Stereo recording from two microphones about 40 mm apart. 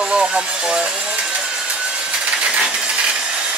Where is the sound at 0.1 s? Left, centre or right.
Right.